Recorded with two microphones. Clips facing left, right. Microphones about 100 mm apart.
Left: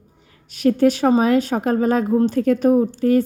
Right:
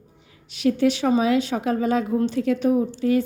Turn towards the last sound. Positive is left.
turn(degrees=45)  # may be behind; listen again after turning